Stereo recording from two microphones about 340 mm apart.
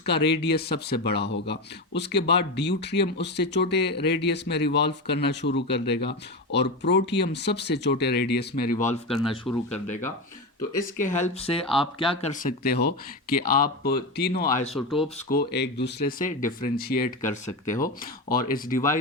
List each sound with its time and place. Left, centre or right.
0.0 s speech: left
14.8 s speech: centre
15.3 s speech: left